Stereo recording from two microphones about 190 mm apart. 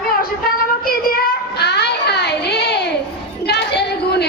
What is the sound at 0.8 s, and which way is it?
Child singing, 50° left (ahead or behind).